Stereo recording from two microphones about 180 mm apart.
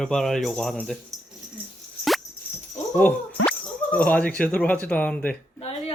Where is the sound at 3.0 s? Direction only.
10° left (ahead or behind).